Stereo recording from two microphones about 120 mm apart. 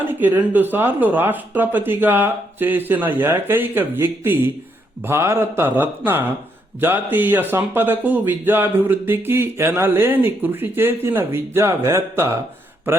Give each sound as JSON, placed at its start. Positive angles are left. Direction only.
{"t": 0.0, "sound": "speech", "side_deg": -15}